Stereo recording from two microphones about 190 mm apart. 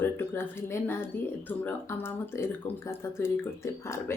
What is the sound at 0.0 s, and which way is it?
Speech, 10° left (ahead or behind).